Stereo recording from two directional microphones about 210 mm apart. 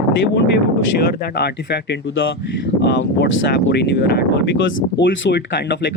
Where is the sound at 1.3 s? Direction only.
55° left (ahead or behind).